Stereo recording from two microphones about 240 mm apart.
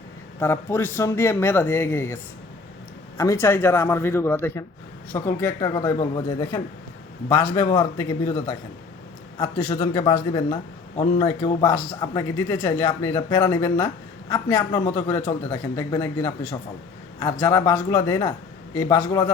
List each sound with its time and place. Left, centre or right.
0.3 s a woman's voice: centre
3.2 s a woman's voice: centre
7.3 s a woman's voice: centre